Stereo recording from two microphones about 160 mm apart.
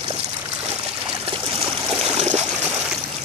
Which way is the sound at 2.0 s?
45° right (ahead or behind).